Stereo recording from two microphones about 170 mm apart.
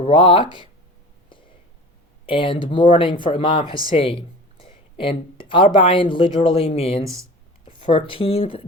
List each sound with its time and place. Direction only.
0.0 s speech: 30° left (ahead or behind)
2.2 s speech: 30° left (ahead or behind)
4.6 s a sound: 30° left (ahead or behind)
5.8 s speech: 30° left (ahead or behind)
7.0 s speech: 20° right (ahead or behind)
7.9 s speech: 30° left (ahead or behind)